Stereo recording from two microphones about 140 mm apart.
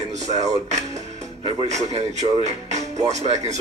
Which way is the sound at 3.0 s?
55° right (ahead or behind).